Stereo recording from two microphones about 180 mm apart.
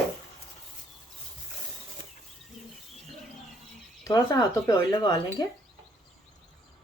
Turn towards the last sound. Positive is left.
turn(degrees=20)  # may be behind; listen again after turning